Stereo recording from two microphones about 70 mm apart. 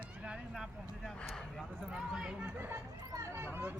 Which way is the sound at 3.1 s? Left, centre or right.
Right.